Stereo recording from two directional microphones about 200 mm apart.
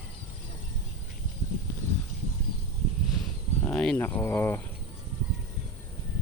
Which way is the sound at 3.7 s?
5° left (ahead or behind).